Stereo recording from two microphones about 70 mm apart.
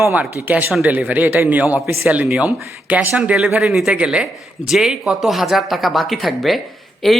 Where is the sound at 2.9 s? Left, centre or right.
Right; by 6.6 s centre.